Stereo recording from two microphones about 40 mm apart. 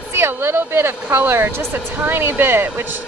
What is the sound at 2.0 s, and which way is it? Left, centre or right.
Speech, right.